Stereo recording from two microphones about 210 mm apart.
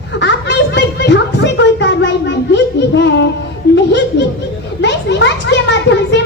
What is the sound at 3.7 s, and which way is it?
Chuckle, 55° left (ahead or behind).